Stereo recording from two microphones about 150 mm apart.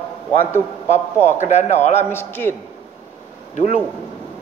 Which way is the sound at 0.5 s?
15° left (ahead or behind).